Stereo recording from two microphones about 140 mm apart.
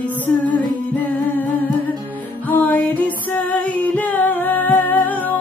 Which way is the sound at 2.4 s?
10° left (ahead or behind).